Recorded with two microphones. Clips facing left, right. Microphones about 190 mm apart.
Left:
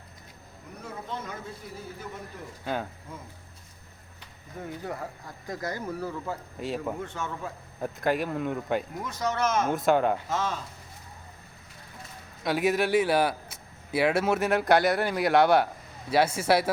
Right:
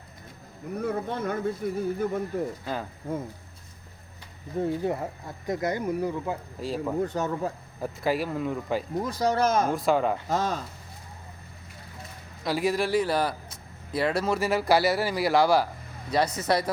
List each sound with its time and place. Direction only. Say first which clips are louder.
0.8 s speech: right 8 dB; 55° right (ahead or behind)
4.5 s speech: right 9 dB; 25° right (ahead or behind)
6.6 s speech: even; centre (ahead or behind)
7.0 s speech: right 7 dB; 40° right (ahead or behind)
7.8 s speech: even; centre (ahead or behind)
9.0 s speech: right 4 dB; 35° right (ahead or behind)
9.6 s speech: even; centre (ahead or behind)
10.2 s speech: right 3 dB; 35° right (ahead or behind)
12.4 s speech: left 1 dB; centre (ahead or behind)